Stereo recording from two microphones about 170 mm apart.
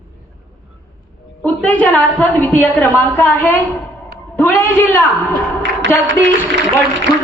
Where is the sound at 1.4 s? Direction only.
10° left (ahead or behind).